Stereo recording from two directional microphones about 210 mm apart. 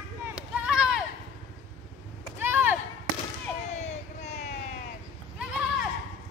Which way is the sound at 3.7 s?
30° left (ahead or behind).